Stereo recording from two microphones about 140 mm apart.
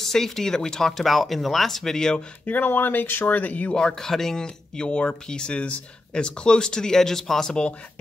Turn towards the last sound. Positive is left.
turn(degrees=5)  # may be behind; listen again after turning